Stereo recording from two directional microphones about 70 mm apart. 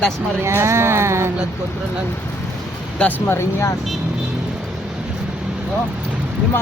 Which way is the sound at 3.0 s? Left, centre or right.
Left.